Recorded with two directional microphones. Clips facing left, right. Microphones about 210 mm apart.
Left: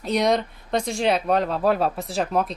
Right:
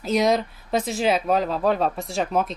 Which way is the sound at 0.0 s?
Centre (ahead or behind).